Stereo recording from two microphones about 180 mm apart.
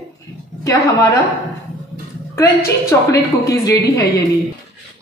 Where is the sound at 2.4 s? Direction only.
15° left (ahead or behind).